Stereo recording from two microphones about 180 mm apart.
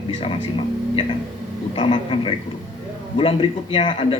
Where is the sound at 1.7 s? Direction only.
30° left (ahead or behind).